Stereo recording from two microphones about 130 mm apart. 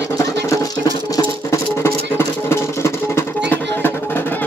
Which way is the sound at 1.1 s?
20° left (ahead or behind).